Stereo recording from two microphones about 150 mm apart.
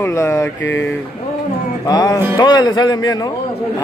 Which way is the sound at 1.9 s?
25° left (ahead or behind).